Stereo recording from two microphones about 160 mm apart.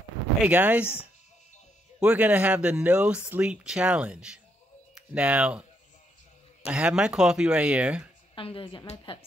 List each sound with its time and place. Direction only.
0.4 s speech: 10° right (ahead or behind)
6.7 s speech: 5° right (ahead or behind)
8.4 s a woman's voice: 35° left (ahead or behind)